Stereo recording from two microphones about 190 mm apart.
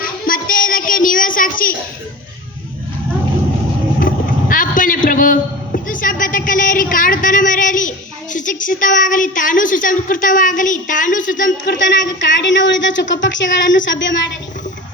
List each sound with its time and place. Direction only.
0.3 s child singing: 45° left (ahead or behind)
4.0 s vehicle: 45° left (ahead or behind)
6.9 s a woman's voice: 45° left (ahead or behind)
11.6 s speech: 70° left (ahead or behind)